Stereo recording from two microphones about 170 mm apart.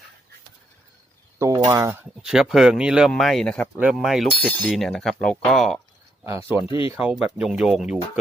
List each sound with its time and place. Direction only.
1.4 s speech: 20° right (ahead or behind)
2.2 s speech: 5° right (ahead or behind)
6.2 s speech: 15° right (ahead or behind)